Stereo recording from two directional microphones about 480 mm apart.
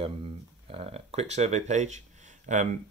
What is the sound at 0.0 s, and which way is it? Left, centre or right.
Speech, centre.